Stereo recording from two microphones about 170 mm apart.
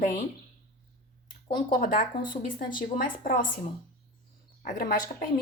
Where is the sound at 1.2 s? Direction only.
55° left (ahead or behind).